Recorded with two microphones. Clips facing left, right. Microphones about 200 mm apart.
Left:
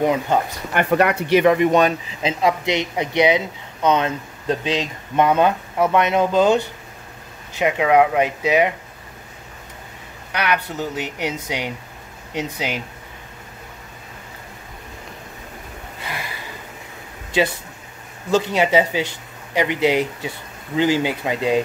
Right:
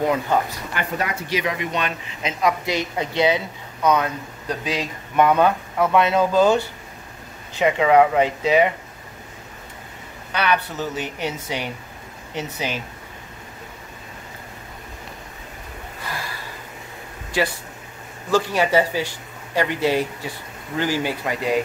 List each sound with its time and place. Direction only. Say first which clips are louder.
0.7 s speech: left 9 dB; 65° left (ahead or behind); by 2.0 s 45° left (ahead or behind)
2.2 s speech: left 3 dB; 25° left (ahead or behind)
7.5 s speech: even; 10° left (ahead or behind)
10.3 s speech: even; 10° left (ahead or behind)
17.3 s speech: left 3 dB; 20° left (ahead or behind)